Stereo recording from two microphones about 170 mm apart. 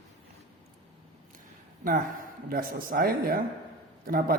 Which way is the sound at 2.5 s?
60° right (ahead or behind).